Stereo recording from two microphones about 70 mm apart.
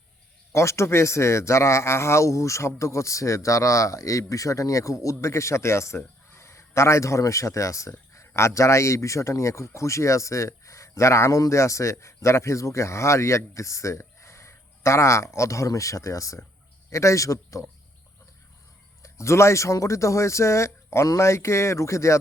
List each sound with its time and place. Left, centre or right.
0.5 s a man's voice: left
19.0 s speech: left